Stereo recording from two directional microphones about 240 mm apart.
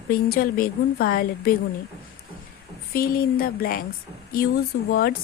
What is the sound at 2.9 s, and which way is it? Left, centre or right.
Speech, left.